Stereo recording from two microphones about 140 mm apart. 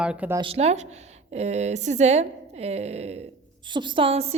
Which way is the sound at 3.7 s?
35° right (ahead or behind).